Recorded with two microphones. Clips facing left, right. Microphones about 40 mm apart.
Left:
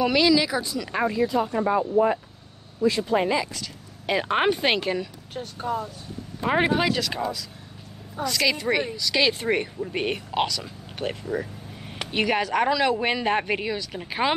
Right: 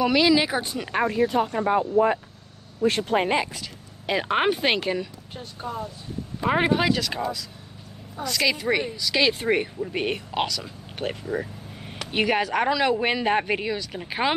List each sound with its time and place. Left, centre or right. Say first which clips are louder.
0.0 s speech: even; centre
0.3 s speech: even; right
1.0 s speech: right 1 dB; right
2.8 s speech: even; right
4.0 s speech: even; centre
6.4 s speech: even; centre